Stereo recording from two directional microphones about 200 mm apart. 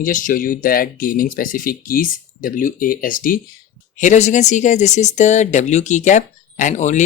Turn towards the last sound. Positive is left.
turn(degrees=35)  # may be behind; listen again after turning